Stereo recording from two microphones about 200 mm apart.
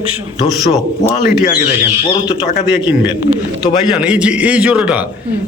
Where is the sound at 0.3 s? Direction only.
30° left (ahead or behind).